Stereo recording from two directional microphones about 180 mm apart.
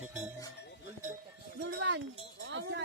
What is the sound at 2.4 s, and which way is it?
Speech, 85° right.